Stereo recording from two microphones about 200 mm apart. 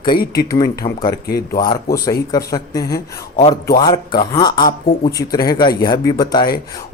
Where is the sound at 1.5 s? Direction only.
20° left (ahead or behind).